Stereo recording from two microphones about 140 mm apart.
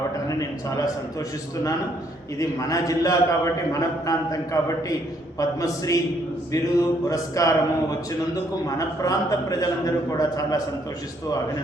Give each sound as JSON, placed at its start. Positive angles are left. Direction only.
{"t": 0.3, "sound": "a man's voice", "side_deg": 25}
{"t": 2.4, "sound": "a man's voice", "side_deg": 25}
{"t": 9.0, "sound": "a man's voice", "side_deg": 25}